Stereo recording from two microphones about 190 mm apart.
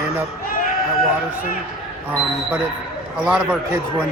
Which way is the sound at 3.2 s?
5° right (ahead or behind).